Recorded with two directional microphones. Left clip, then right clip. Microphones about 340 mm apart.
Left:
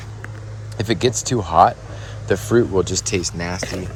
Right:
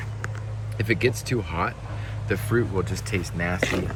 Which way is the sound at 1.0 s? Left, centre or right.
Centre.